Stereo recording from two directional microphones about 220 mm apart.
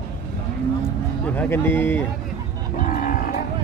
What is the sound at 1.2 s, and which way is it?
Speech, 10° left (ahead or behind).